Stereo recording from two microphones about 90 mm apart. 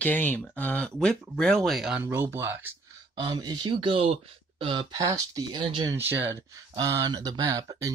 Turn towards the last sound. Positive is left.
turn(degrees=-40)  # may be behind; listen again after turning